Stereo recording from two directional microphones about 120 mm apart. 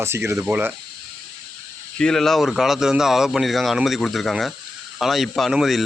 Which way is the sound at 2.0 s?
5° left (ahead or behind).